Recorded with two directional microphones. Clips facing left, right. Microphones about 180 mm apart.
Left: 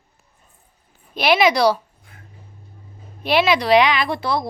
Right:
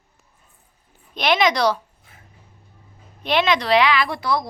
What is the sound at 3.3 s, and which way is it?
Speech, 10° left (ahead or behind).